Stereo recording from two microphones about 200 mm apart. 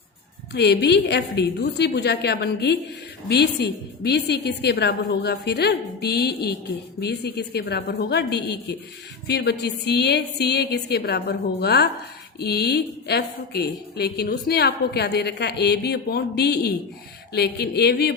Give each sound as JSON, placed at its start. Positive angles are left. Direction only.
{"t": 0.5, "sound": "a woman's voice", "side_deg": 55}